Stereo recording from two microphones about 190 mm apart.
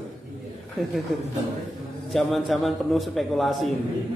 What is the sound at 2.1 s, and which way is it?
A man's voice, centre (ahead or behind).